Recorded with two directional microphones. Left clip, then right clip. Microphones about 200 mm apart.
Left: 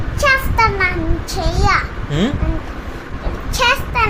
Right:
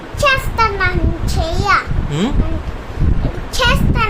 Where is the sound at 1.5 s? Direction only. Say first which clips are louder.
Right 2 dB; 5° left (ahead or behind).